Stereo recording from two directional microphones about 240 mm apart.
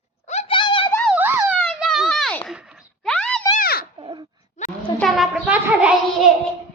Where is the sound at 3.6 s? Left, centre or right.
Left.